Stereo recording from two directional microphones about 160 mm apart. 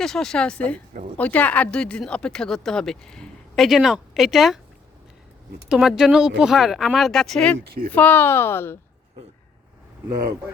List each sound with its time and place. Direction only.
0.0 s speech: 5° left (ahead or behind)
5.6 s a woman's voice: 5° right (ahead or behind); by 8.8 s 15° left (ahead or behind)